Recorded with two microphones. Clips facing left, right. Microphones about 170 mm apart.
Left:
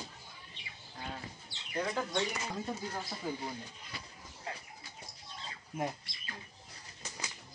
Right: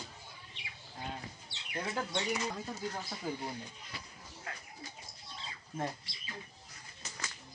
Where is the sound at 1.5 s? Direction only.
70° right (ahead or behind).